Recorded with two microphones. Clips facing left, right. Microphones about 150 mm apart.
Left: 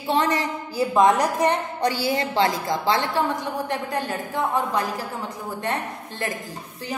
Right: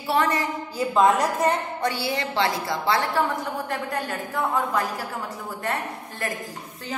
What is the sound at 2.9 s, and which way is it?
A woman's voice, 20° left (ahead or behind).